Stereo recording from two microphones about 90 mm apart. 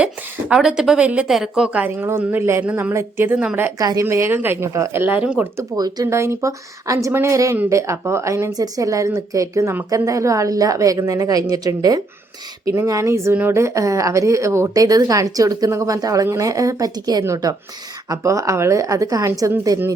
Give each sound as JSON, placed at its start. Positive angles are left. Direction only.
{"t": 0.0, "sound": "a woman's voice", "side_deg": -10}
{"t": 1.8, "sound": "speech", "side_deg": -20}
{"t": 2.9, "sound": "speech", "side_deg": -30}
{"t": 3.3, "sound": "speech", "side_deg": -15}
{"t": 3.8, "sound": "a woman's voice", "side_deg": -40}
{"t": 4.0, "sound": "a woman's voice", "side_deg": -30}
{"t": 5.0, "sound": "speech", "side_deg": -15}
{"t": 5.7, "sound": "speech", "side_deg": -45}
{"t": 6.1, "sound": "a woman's voice", "side_deg": -30}
{"t": 17.2, "sound": "a woman's voice", "side_deg": -35}